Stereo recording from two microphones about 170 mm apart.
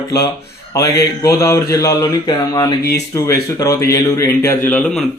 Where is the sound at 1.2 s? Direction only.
20° left (ahead or behind).